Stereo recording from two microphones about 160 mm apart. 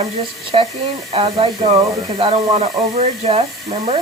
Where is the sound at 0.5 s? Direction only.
40° right (ahead or behind).